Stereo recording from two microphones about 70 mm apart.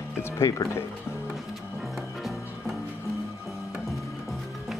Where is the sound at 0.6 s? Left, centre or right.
Left.